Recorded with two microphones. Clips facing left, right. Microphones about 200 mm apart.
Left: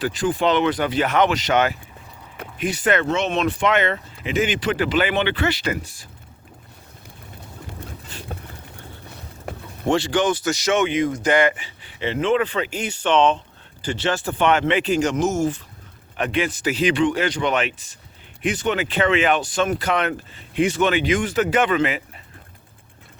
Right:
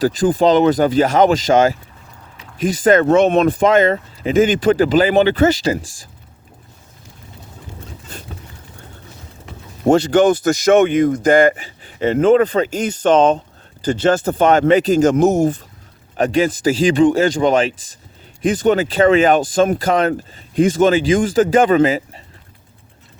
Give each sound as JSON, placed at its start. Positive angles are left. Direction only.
{"t": 0.0, "sound": "speech", "side_deg": -40}
{"t": 2.4, "sound": "a sound", "side_deg": 55}
{"t": 2.8, "sound": "speech", "side_deg": -40}
{"t": 3.1, "sound": "speech", "side_deg": -55}
{"t": 3.6, "sound": "speech", "side_deg": -40}
{"t": 9.5, "sound": "a sound", "side_deg": 55}
{"t": 9.8, "sound": "speech", "side_deg": -40}
{"t": 15.1, "sound": "speech", "side_deg": -55}
{"t": 16.1, "sound": "speech", "side_deg": -40}